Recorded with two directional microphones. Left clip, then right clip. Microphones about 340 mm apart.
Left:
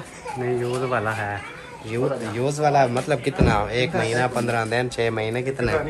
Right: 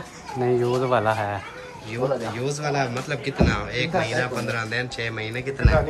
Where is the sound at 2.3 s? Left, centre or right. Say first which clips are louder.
Left 6 dB; centre.